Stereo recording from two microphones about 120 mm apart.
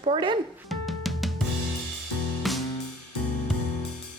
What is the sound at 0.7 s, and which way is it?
Music, centre (ahead or behind).